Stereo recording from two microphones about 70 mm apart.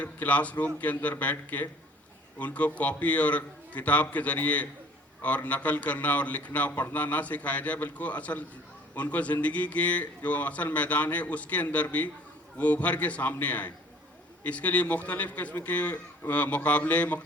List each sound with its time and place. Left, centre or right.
0.0 s speech: left